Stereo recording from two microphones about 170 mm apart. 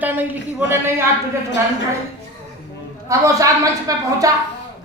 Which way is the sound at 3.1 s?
20° right (ahead or behind).